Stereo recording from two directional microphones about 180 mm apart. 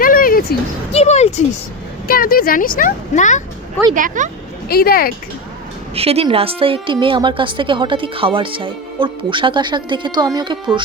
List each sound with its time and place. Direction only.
0.0 s a sound: 50° left (ahead or behind)
0.9 s speech: 40° left (ahead or behind)
2.0 s speech: 55° left (ahead or behind)
3.9 s speech: 45° right (ahead or behind)
4.7 s speech: 55° left (ahead or behind)
5.9 s a woman's voice: 35° right (ahead or behind)